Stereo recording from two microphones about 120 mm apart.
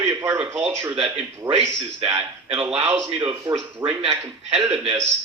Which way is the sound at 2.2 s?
45° right (ahead or behind).